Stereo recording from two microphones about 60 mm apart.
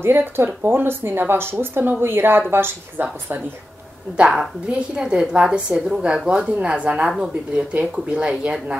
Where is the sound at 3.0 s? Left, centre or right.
Right.